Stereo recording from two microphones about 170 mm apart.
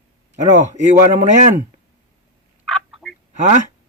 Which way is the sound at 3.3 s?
45° right (ahead or behind).